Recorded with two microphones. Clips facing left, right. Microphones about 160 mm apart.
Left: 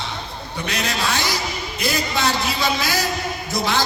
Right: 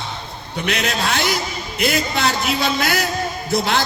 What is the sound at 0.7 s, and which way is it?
A man's voice, 60° right (ahead or behind).